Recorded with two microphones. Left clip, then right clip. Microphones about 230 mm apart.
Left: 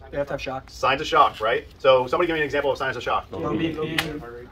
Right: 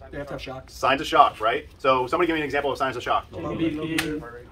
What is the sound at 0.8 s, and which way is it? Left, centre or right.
Speech, right.